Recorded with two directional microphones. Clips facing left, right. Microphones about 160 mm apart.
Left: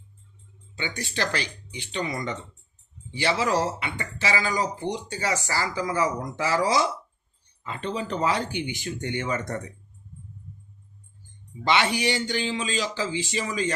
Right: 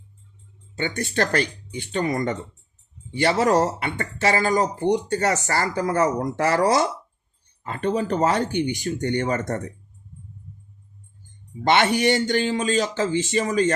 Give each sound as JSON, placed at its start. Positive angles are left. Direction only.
{"t": 0.8, "sound": "speech", "side_deg": -50}
{"t": 11.6, "sound": "speech", "side_deg": -50}